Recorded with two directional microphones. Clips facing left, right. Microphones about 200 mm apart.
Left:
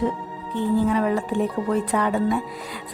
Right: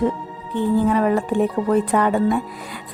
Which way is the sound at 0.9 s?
50° right (ahead or behind).